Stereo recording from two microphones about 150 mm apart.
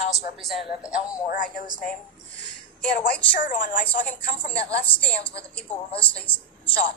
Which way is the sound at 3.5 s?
60° left (ahead or behind).